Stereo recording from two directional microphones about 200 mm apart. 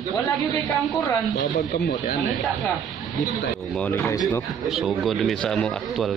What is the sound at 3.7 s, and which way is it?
Speech, 10° left (ahead or behind).